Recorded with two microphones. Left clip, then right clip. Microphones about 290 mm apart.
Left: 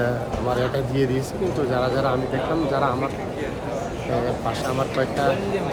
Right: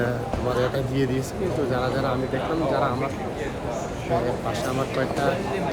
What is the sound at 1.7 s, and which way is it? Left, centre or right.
Speech, centre.